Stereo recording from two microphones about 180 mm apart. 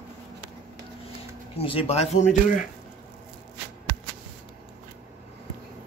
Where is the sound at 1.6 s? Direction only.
30° left (ahead or behind).